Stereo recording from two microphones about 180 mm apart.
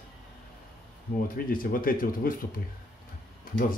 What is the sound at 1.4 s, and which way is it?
Speech, 50° left (ahead or behind).